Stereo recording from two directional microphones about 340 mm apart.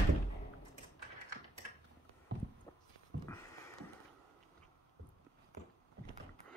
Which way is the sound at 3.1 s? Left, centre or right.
Right.